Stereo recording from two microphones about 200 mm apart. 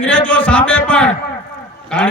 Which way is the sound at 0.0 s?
5° left (ahead or behind).